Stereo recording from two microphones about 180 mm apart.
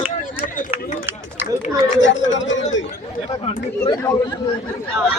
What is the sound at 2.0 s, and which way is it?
Chatter, 90° left.